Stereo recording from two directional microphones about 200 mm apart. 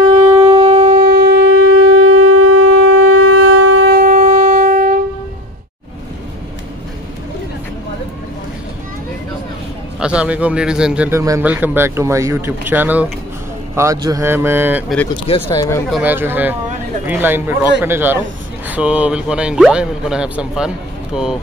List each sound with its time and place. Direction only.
0.4 s shofar: 30° right (ahead or behind)
1.0 s shofar: 55° right (ahead or behind)
1.8 s shofar: 90° right
4.0 s wind instrument: 40° right (ahead or behind)
9.9 s speech: 5° right (ahead or behind)
15.4 s speech: 15° left (ahead or behind)
15.9 s speech: 10° right (ahead or behind)